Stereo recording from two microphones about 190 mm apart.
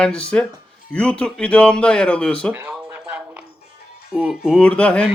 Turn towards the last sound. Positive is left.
turn(degrees=5)  # may be behind; listen again after turning